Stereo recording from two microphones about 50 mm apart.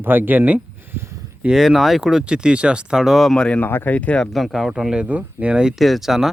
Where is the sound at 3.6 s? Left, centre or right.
Left.